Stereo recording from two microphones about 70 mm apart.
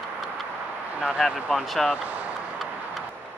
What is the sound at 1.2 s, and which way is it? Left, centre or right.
Speech, centre.